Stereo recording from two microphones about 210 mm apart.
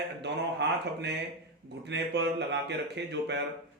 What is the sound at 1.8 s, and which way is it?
Speech, 55° right (ahead or behind).